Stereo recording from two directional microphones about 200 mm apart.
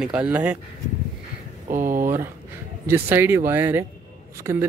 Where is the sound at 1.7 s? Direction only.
40° right (ahead or behind).